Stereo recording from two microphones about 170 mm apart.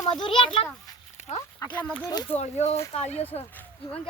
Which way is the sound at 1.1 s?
40° left (ahead or behind).